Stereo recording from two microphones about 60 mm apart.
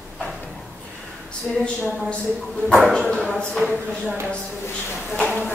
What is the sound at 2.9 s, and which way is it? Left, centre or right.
Speech, centre.